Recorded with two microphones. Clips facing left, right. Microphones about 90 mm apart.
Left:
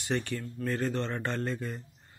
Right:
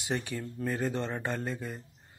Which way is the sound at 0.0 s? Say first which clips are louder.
Left 2 dB; 10° right (ahead or behind).